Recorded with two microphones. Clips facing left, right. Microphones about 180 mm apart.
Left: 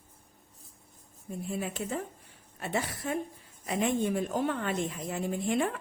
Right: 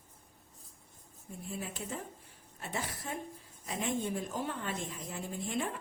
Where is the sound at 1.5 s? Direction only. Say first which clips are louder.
Left 6 dB; 70° left (ahead or behind).